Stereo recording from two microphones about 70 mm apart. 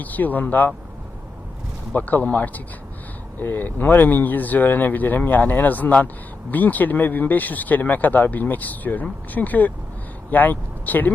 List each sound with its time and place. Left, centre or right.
0.0 s speech: left
1.9 s speech: left